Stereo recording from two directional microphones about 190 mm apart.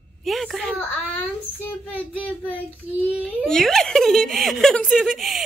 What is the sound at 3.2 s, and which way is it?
Speech, 5° left (ahead or behind).